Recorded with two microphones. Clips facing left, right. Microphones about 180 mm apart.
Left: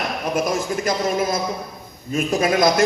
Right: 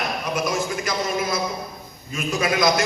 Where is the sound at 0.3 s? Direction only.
50° left (ahead or behind).